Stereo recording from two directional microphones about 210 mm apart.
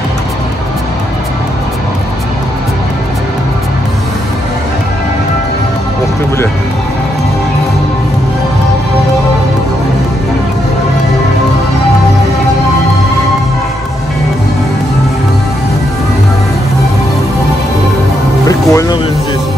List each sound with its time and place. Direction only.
18.5 s music: 15° left (ahead or behind)